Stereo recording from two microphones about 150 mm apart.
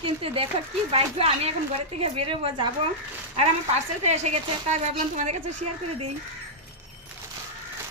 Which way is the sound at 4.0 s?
50° right (ahead or behind).